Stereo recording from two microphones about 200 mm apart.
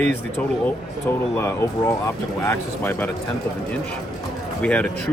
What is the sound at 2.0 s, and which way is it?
Speech, 10° left (ahead or behind).